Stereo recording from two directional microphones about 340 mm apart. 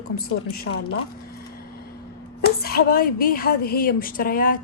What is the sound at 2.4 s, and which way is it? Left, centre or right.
A woman's voice, left.